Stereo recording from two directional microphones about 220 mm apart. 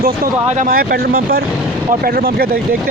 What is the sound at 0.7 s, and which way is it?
Speech, 40° right (ahead or behind).